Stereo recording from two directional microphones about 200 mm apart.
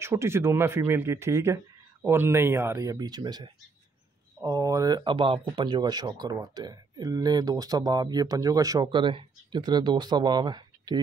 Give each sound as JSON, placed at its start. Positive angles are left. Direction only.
{"t": 0.0, "sound": "speech", "side_deg": -15}